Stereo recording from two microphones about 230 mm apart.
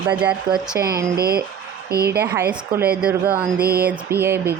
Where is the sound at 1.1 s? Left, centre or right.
Right.